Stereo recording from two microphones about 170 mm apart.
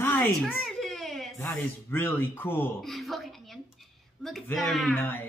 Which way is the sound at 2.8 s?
Centre (ahead or behind).